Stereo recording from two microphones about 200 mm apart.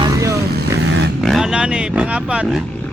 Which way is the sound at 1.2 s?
Centre (ahead or behind).